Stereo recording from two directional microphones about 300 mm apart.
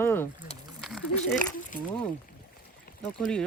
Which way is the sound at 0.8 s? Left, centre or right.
Centre.